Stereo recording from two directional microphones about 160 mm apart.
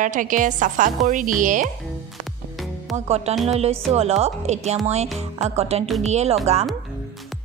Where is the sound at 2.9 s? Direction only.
Centre (ahead or behind).